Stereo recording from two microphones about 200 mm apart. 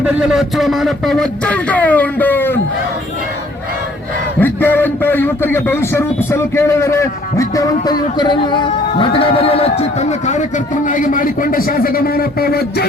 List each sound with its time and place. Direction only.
0.0 s a man's voice: 5° right (ahead or behind)
4.4 s a man's voice: 10° left (ahead or behind); by 12.8 s 50° left (ahead or behind)